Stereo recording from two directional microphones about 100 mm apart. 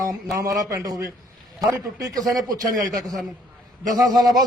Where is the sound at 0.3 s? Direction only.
35° right (ahead or behind).